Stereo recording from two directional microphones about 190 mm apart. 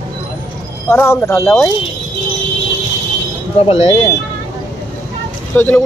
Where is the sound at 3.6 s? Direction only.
35° left (ahead or behind).